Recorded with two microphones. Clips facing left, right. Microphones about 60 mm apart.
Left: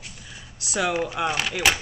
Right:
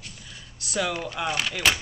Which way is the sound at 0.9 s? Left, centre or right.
Centre.